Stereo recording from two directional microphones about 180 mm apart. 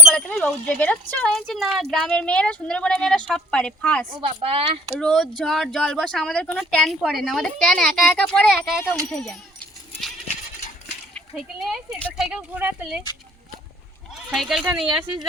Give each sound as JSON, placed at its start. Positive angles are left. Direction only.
{"t": 0.1, "sound": "speech", "side_deg": 5}
{"t": 4.2, "sound": "speech", "side_deg": -30}
{"t": 4.9, "sound": "speech", "side_deg": 5}
{"t": 11.3, "sound": "speech", "side_deg": 0}
{"t": 14.3, "sound": "speech", "side_deg": -5}